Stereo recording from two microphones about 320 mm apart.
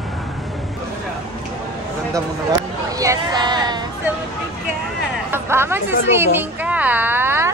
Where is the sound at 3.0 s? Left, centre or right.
Centre.